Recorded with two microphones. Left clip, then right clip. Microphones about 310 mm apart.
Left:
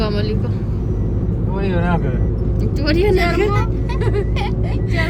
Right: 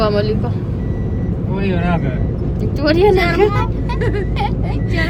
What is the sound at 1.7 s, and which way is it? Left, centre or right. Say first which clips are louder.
Speech: right 1 dB; left.